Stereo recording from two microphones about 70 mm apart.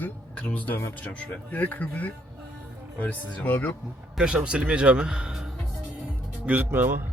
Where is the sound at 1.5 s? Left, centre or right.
Left.